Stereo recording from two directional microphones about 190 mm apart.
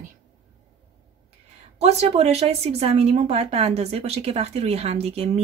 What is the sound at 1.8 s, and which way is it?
A woman's voice, 35° right (ahead or behind).